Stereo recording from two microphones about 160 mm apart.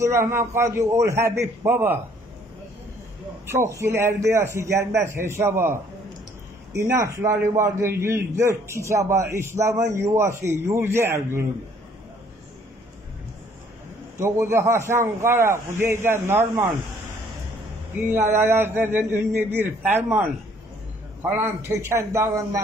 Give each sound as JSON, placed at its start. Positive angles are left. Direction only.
{"t": 0.0, "sound": "a man's voice", "side_deg": -15}
{"t": 3.4, "sound": "a man's voice", "side_deg": -20}
{"t": 14.1, "sound": "a man's voice", "side_deg": -15}
{"t": 17.9, "sound": "a man's voice", "side_deg": -15}
{"t": 21.3, "sound": "a man's voice", "side_deg": -15}